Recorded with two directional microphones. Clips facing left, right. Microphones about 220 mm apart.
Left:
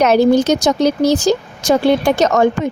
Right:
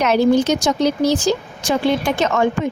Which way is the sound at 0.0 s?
40° left (ahead or behind).